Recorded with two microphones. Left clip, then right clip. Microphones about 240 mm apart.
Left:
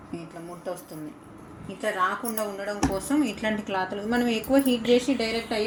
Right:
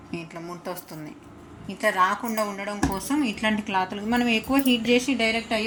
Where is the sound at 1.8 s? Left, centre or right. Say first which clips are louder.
Right 4 dB; right.